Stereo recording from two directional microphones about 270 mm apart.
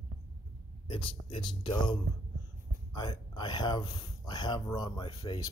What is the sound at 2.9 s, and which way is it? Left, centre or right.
Speech, centre.